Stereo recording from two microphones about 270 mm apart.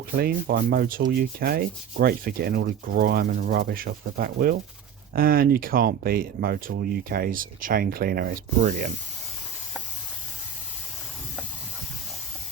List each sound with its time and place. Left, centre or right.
0.2 s sanding: right